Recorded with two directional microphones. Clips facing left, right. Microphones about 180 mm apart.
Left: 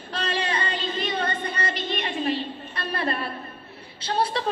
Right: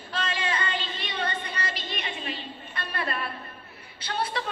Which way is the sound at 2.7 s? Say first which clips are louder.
Left 4 dB; 30° left (ahead or behind).